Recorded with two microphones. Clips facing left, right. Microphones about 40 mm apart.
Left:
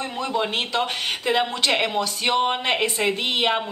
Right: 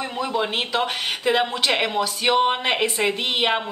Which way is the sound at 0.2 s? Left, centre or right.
Centre.